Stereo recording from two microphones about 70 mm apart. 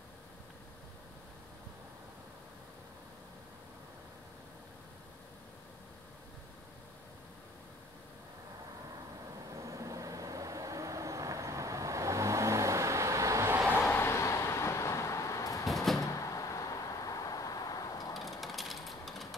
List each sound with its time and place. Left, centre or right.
9.6 s vehicle: right
13.8 s vehicle: left
15.7 s door: centre
16.0 s door: left
18.4 s a sound: centre